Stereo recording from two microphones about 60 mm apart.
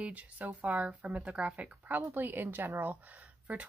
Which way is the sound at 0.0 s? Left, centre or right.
Right.